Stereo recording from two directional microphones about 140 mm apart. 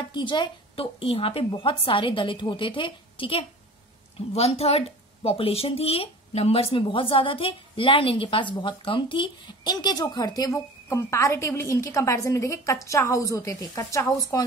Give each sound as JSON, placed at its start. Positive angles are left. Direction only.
{"t": 0.1, "sound": "a woman's voice", "side_deg": 35}